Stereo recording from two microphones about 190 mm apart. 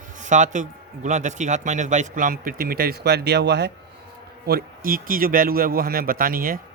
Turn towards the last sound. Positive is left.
turn(degrees=-50)  # may be behind; listen again after turning